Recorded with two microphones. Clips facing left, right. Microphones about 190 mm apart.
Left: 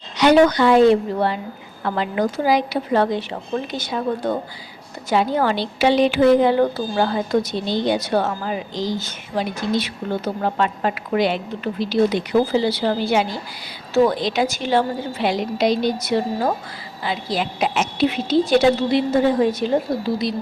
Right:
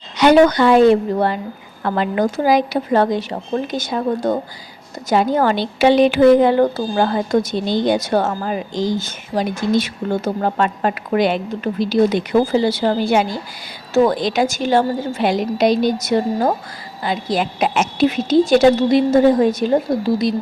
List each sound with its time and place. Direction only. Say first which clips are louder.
0.2 s speech: right 2 dB; 50° right (ahead or behind)